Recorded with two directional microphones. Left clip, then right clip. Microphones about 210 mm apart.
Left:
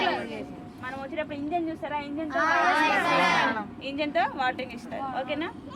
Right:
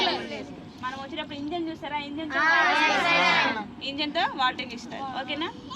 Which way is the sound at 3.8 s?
50° left (ahead or behind).